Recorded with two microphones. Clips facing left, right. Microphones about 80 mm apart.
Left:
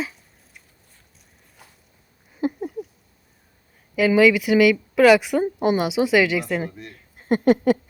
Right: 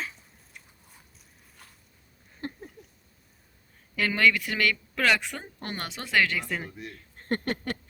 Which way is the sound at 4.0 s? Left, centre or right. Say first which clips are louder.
Left 9 dB; centre.